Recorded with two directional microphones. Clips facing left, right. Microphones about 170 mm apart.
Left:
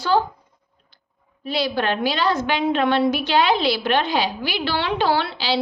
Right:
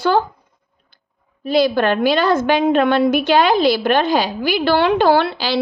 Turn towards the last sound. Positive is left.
turn(degrees=-50)  # may be behind; listen again after turning